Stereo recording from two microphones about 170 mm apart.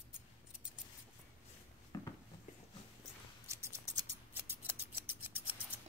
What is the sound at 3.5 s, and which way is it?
Scissors, 15° right (ahead or behind).